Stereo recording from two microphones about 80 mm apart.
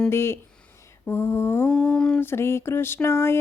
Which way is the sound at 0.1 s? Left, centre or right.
Left.